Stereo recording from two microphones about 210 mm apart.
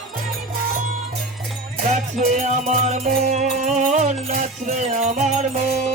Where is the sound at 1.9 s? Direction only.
35° right (ahead or behind).